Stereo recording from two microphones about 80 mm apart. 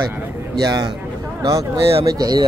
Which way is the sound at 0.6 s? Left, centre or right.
Right.